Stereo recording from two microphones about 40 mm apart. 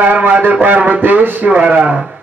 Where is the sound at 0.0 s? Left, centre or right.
Right.